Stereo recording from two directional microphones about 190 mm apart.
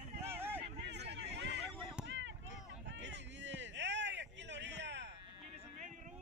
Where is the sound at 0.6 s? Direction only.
65° right (ahead or behind).